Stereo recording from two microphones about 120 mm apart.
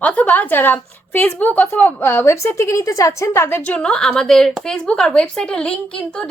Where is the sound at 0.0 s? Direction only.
10° left (ahead or behind).